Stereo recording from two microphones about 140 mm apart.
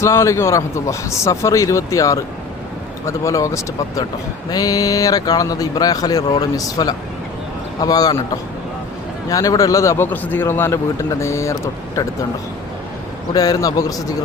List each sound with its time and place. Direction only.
0.0 s a man's voice: 20° left (ahead or behind)
13.3 s a man's voice: 25° left (ahead or behind)